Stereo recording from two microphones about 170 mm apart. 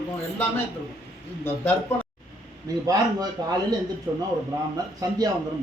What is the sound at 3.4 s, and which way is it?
A man's voice, 25° right (ahead or behind).